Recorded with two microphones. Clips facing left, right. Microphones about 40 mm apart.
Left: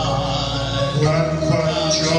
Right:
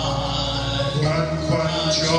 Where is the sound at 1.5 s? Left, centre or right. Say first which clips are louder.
Even; right.